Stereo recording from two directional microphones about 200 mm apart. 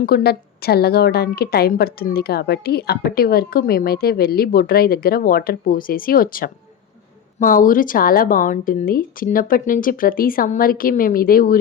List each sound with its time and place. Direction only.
0.0 s a woman's voice: 50° left (ahead or behind)